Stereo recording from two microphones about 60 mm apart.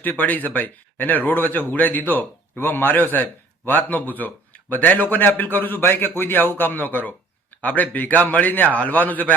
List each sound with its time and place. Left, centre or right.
0.0 s a man's voice: left